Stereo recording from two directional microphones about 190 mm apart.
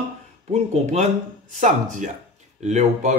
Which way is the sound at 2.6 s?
40° right (ahead or behind).